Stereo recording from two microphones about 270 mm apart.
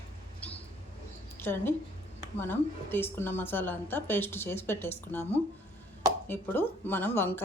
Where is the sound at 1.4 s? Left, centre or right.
Centre.